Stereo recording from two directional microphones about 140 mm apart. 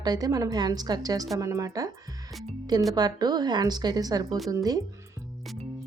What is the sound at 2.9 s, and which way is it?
A woman's voice, 25° right (ahead or behind).